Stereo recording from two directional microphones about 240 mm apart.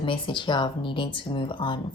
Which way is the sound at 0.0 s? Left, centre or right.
Left.